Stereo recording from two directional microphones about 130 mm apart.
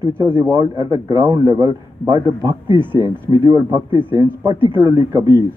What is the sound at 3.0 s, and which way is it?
Speech, 25° right (ahead or behind).